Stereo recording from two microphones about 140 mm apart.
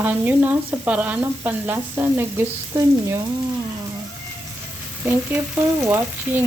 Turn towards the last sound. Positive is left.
turn(degrees=-15)  # may be behind; listen again after turning